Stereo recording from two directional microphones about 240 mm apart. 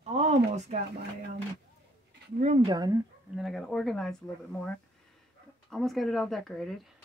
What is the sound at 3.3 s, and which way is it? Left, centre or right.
Speech, centre.